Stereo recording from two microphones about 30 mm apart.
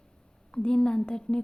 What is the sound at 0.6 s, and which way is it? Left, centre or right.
Speech, left.